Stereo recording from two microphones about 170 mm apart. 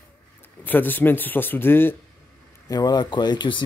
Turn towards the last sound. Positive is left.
turn(degrees=25)  # may be behind; listen again after turning